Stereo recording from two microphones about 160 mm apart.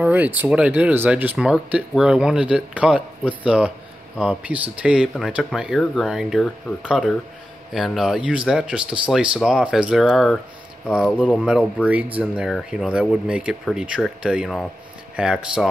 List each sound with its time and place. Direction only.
0.0 s speech: 10° right (ahead or behind)